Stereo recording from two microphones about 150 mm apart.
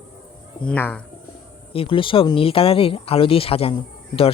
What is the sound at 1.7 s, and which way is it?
Speech, 35° left (ahead or behind).